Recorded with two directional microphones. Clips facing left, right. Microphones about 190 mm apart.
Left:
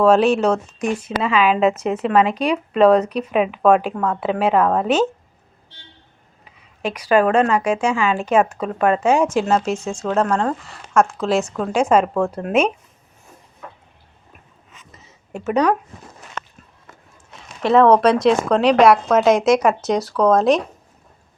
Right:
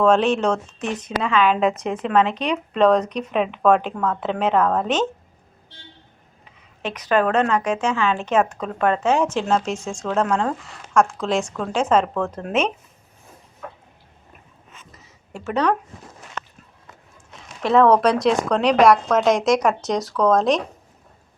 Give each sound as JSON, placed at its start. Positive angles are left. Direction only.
{"t": 0.0, "sound": "speech", "side_deg": 10}
{"t": 6.8, "sound": "speech", "side_deg": 10}
{"t": 14.8, "sound": "a sound", "side_deg": 20}
{"t": 17.6, "sound": "speech", "side_deg": 0}